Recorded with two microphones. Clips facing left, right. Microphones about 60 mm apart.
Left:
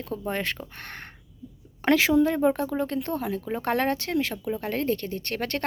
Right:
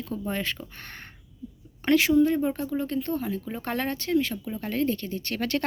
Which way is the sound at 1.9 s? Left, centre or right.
Left.